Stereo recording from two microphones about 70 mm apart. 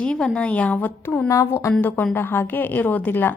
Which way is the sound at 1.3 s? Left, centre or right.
Left.